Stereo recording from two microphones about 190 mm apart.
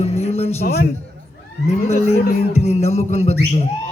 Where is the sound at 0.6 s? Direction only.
55° left (ahead or behind).